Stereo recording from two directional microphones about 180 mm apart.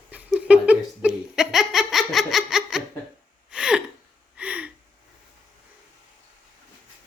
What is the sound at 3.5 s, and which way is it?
Gasp, 5° right (ahead or behind).